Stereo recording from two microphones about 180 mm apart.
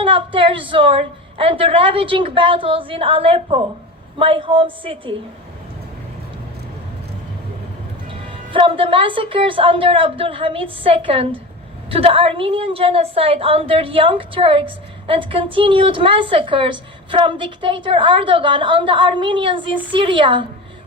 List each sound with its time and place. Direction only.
0.0 s a woman's voice: 30° right (ahead or behind)
8.5 s a woman's voice: 30° right (ahead or behind)